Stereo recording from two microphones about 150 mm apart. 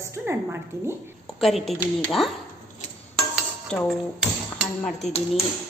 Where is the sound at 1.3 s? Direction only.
Centre (ahead or behind).